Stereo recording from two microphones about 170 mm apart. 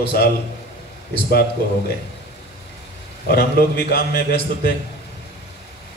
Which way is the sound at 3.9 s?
60° left (ahead or behind).